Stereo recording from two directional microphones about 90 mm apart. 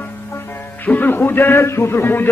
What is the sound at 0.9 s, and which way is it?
A man's voice, 20° left (ahead or behind).